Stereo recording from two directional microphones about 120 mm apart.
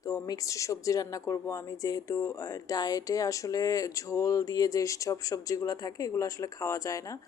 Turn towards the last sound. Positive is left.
turn(degrees=30)  # may be behind; listen again after turning